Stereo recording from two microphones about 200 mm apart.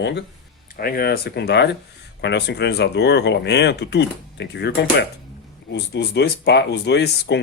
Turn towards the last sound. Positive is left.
turn(degrees=55)  # may be behind; listen again after turning